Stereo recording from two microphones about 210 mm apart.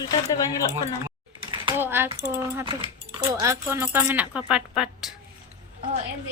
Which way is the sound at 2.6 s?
25° right (ahead or behind).